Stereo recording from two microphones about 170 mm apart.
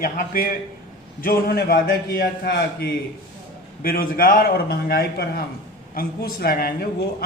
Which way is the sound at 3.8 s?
60° left (ahead or behind).